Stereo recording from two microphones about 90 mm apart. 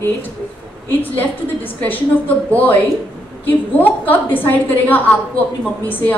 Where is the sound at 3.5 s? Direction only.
20° left (ahead or behind).